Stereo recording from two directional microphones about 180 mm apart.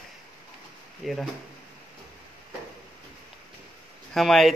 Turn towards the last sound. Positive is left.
turn(degrees=0)  # may be behind; listen again after turning